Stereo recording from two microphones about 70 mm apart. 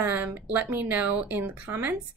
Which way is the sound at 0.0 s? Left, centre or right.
Right.